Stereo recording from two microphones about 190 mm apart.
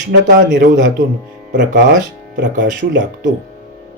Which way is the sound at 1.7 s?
45° right (ahead or behind).